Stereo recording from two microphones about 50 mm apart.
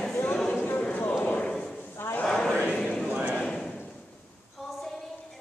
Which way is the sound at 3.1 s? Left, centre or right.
Right.